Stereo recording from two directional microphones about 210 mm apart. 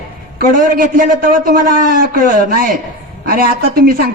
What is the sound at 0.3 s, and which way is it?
A man's voice, 40° right (ahead or behind).